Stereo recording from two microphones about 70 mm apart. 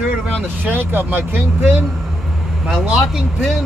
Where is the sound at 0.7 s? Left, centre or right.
Right.